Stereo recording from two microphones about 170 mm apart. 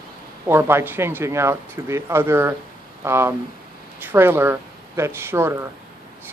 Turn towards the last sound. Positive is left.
turn(degrees=-15)  # may be behind; listen again after turning